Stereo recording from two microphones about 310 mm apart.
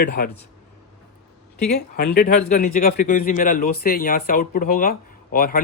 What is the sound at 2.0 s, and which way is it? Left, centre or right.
Speech, left.